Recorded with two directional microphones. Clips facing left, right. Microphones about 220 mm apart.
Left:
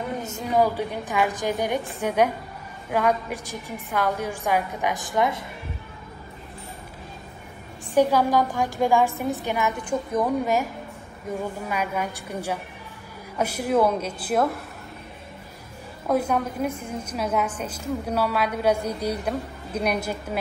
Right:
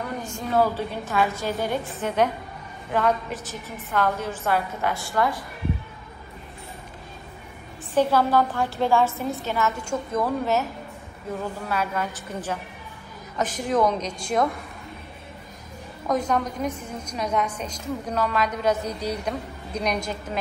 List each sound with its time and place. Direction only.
0.2 s a woman's voice: 20° left (ahead or behind)
7.9 s a woman's voice: 15° left (ahead or behind)
16.1 s a woman's voice: 10° left (ahead or behind)